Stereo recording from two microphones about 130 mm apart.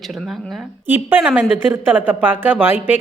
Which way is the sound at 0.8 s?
15° right (ahead or behind).